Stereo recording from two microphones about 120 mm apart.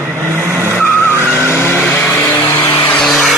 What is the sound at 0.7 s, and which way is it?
Vehicle, 15° left (ahead or behind).